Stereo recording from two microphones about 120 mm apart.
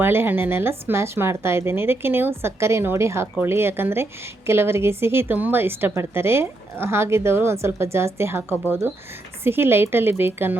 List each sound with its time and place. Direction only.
0.0 s speech: 20° right (ahead or behind)